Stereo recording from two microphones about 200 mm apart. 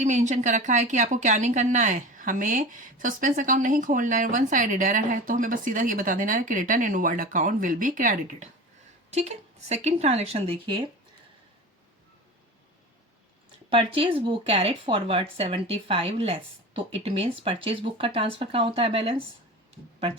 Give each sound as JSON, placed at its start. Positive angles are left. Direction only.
{"t": 0.0, "sound": "speech", "side_deg": -35}
{"t": 13.7, "sound": "speech", "side_deg": -25}